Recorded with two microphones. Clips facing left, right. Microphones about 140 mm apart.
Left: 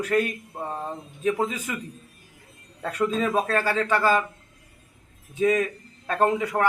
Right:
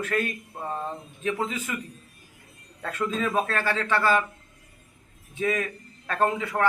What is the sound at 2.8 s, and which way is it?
Speech, 15° left (ahead or behind).